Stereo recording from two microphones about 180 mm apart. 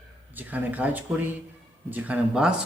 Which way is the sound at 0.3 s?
10° right (ahead or behind).